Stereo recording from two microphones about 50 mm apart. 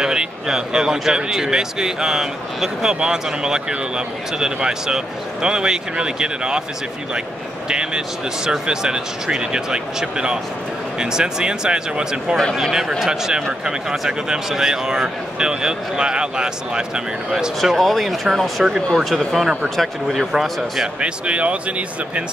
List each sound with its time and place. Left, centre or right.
0.0 s speech: centre
7.6 s speech: centre
17.7 s speech: centre
21.0 s speech: right